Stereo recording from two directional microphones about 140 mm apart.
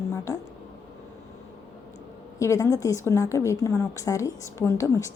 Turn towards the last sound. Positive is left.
turn(degrees=20)  # may be behind; listen again after turning